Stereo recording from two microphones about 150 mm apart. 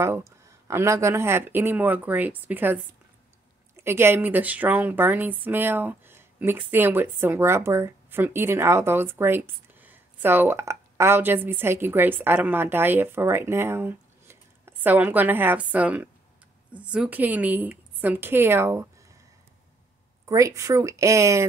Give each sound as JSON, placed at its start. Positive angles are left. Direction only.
{"t": 0.0, "sound": "speech", "side_deg": -20}
{"t": 3.8, "sound": "speech", "side_deg": -15}
{"t": 20.2, "sound": "speech", "side_deg": -20}